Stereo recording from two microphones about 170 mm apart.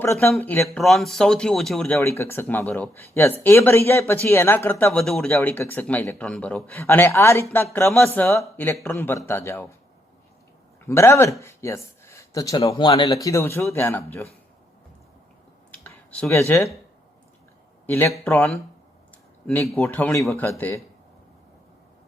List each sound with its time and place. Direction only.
0.0 s speech: 15° left (ahead or behind)
2.0 s speech: 15° left (ahead or behind)
10.8 s speech: 15° left (ahead or behind)
15.8 s a sound: 5° left (ahead or behind)
16.3 s speech: 15° left (ahead or behind)
17.8 s a man's voice: 15° left (ahead or behind)